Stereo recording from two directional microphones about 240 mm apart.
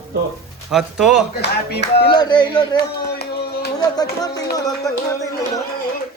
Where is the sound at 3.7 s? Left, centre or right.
Centre.